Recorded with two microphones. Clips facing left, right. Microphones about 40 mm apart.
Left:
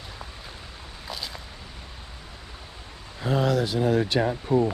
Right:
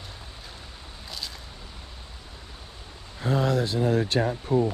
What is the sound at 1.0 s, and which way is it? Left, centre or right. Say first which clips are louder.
Boat: left 3 dB; centre.